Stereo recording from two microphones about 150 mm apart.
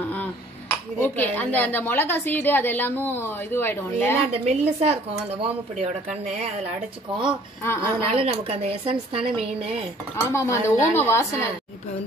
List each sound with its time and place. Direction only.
1.0 s a woman's voice: 10° left (ahead or behind)
4.5 s speech: 45° right (ahead or behind)
7.6 s a woman's voice: 15° left (ahead or behind)
8.1 s speech: 40° right (ahead or behind)
10.1 s speech: 20° left (ahead or behind)